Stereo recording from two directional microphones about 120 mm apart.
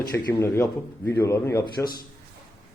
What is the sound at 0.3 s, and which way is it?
Speech, 20° left (ahead or behind).